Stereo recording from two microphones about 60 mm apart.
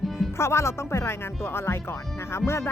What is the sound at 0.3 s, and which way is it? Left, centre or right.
Speech, left.